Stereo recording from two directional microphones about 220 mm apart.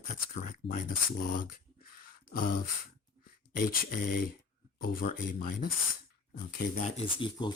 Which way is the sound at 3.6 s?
40° left (ahead or behind).